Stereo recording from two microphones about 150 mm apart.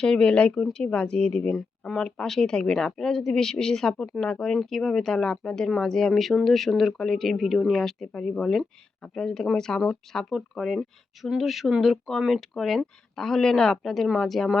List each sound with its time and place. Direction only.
0.0 s speech: 5° left (ahead or behind)